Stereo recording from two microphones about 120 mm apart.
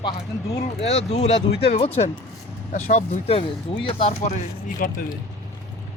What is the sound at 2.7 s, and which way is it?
Speech, 80° left.